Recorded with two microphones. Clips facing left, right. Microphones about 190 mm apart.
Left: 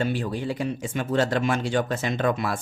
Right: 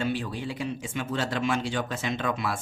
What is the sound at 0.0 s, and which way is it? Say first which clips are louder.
Speech: left 3 dB; 45° left (ahead or behind).